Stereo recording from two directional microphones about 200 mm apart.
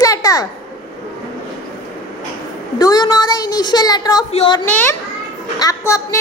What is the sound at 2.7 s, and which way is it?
Speech, 20° left (ahead or behind).